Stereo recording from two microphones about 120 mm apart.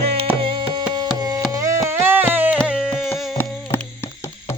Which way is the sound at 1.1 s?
30° right (ahead or behind).